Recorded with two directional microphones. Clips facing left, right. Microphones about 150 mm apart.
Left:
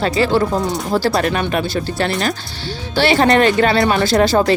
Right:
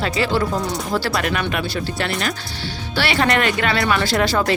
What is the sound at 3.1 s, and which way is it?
Speech, 40° left (ahead or behind).